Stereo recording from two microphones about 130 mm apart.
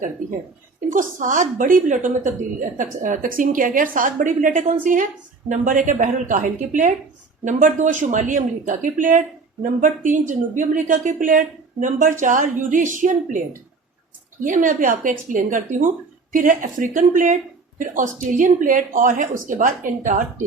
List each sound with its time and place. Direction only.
0.9 s a woman's voice: 90° right
5.5 s a woman's voice: 80° right
14.4 s a woman's voice: 85° right